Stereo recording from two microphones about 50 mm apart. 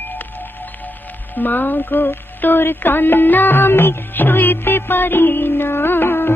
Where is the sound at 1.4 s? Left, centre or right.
Left.